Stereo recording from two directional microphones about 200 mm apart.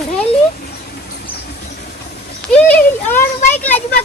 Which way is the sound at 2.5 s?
10° left (ahead or behind).